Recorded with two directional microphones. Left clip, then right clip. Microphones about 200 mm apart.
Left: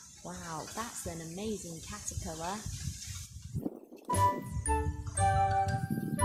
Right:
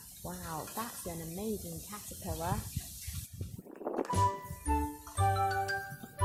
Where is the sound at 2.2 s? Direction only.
15° right (ahead or behind).